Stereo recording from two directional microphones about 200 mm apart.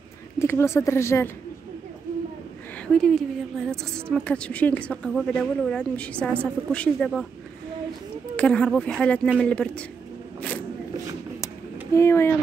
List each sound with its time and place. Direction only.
0.4 s speech: 15° left (ahead or behind)
2.9 s a woman's voice: 5° left (ahead or behind)
8.4 s a woman's voice: 5° left (ahead or behind)
11.4 s a sound: 15° left (ahead or behind)